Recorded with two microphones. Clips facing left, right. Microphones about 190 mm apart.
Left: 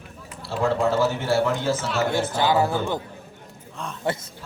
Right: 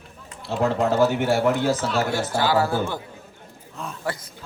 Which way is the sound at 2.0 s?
20° left (ahead or behind).